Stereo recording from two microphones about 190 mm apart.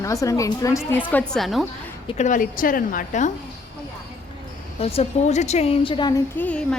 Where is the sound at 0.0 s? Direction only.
15° left (ahead or behind); by 1.6 s centre (ahead or behind).